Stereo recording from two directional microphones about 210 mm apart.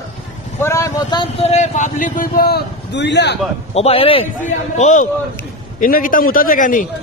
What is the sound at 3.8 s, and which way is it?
A man's voice, 25° left (ahead or behind).